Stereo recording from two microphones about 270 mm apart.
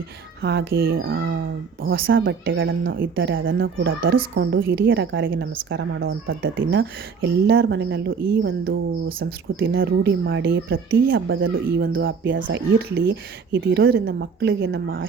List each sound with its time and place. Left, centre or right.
0.4 s speech: right
4.9 s speech: right